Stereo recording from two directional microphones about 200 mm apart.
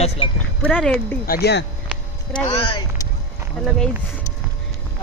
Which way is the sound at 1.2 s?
50° left (ahead or behind).